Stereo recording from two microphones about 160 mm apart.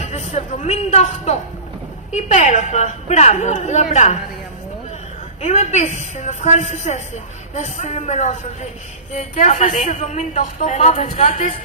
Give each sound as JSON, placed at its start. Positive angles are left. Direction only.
{"t": 0.0, "sound": "a sound", "side_deg": 45}
{"t": 2.1, "sound": "a woman's voice", "side_deg": 50}
{"t": 5.4, "sound": "a woman's voice", "side_deg": 45}